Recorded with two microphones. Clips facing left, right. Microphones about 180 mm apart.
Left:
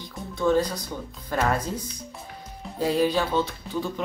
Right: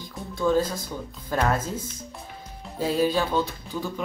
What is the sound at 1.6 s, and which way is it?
Speech, 25° right (ahead or behind).